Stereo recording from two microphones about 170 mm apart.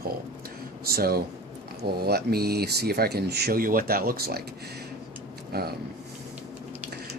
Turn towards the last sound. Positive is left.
turn(degrees=-65)  # may be behind; listen again after turning